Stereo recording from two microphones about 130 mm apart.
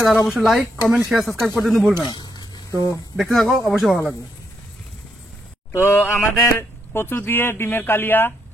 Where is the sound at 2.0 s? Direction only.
35° left (ahead or behind).